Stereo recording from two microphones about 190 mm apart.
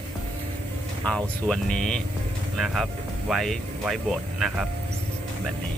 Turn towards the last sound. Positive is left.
turn(degrees=0)  # may be behind; listen again after turning